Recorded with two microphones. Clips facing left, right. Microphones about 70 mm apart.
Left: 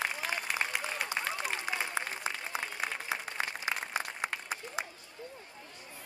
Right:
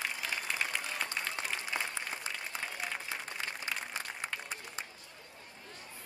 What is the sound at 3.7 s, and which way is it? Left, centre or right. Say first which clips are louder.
Applause: left 2 dB; left.